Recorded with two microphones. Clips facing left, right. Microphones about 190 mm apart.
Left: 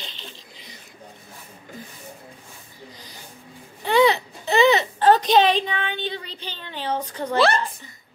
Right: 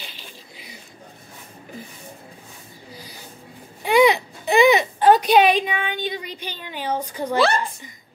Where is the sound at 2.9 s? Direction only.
10° right (ahead or behind).